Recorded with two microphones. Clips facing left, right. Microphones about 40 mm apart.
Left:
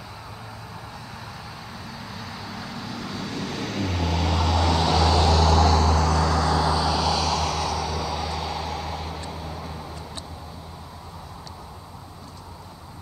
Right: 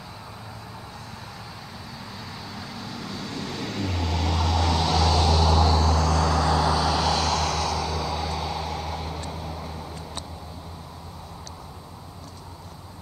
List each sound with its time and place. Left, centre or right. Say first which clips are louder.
2.5 s vehicle: left 2 dB; centre
6.3 s vehicle: even; centre
7.3 s vehicle: even; centre
8.0 s vehicle: even; centre